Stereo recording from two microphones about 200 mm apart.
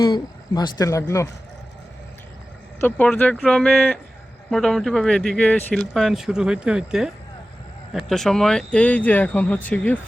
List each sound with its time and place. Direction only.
0.0 s speech: 20° left (ahead or behind)
2.8 s speech: 10° left (ahead or behind)